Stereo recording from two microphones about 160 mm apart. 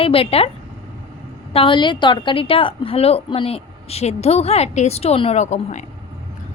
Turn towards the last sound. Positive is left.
turn(degrees=45)  # may be behind; listen again after turning